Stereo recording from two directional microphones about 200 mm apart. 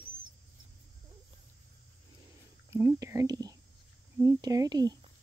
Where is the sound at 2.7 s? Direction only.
15° right (ahead or behind).